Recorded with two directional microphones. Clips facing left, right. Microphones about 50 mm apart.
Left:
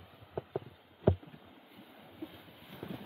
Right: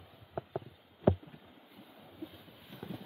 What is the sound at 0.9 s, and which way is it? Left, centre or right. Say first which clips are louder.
Rowboat: right 1 dB; centre.